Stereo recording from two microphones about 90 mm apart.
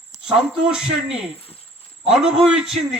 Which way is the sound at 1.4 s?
90° left.